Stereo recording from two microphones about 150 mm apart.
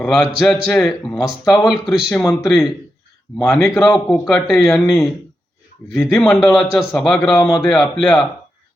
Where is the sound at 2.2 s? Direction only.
20° left (ahead or behind).